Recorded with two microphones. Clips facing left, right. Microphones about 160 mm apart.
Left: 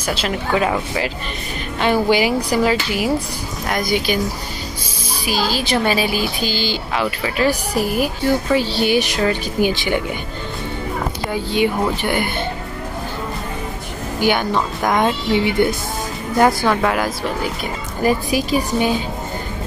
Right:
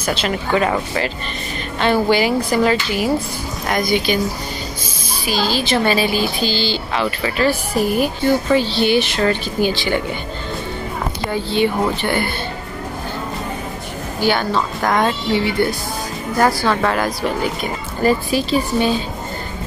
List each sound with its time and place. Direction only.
0.0 s speech: 5° left (ahead or behind)
5.3 s speech: 10° left (ahead or behind)
11.2 s speech: 10° left (ahead or behind)
14.2 s speech: 15° left (ahead or behind)